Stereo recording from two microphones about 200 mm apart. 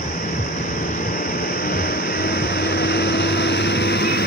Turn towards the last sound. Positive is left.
turn(degrees=55)  # may be behind; listen again after turning